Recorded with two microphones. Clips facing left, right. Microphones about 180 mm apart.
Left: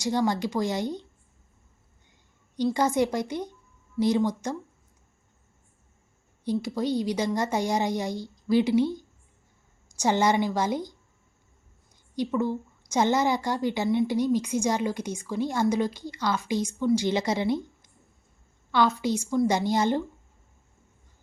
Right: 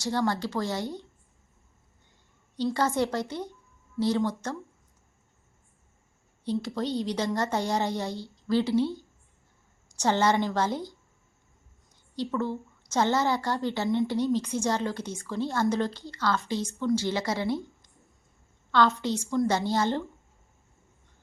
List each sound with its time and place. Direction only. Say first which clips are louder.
0.0 s a woman's voice: left 2 dB; 15° left (ahead or behind)
2.7 s a woman's voice: left 2 dB; 15° left (ahead or behind)
6.4 s a woman's voice: left 2 dB; 10° left (ahead or behind)
12.1 s a woman's voice: left 3 dB; 15° left (ahead or behind)
19.0 s a woman's voice: left 2 dB; 15° left (ahead or behind)